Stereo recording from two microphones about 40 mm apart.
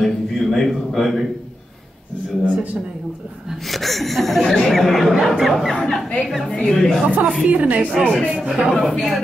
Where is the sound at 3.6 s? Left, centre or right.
Centre.